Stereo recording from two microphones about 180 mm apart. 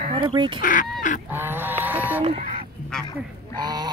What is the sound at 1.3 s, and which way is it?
Goose, 10° right (ahead or behind).